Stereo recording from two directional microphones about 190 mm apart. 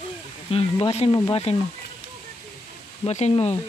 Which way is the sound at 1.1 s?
20° left (ahead or behind).